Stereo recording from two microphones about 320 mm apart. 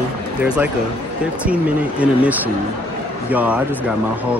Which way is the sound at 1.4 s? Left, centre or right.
Centre.